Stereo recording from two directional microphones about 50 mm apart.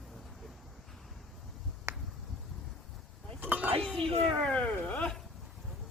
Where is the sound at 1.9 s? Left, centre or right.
Right.